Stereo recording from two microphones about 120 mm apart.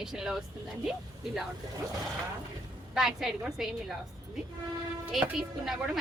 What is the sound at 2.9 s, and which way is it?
Speech, 5° right (ahead or behind).